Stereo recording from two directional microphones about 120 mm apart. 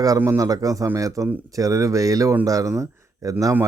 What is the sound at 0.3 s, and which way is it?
A man's voice, 30° right (ahead or behind).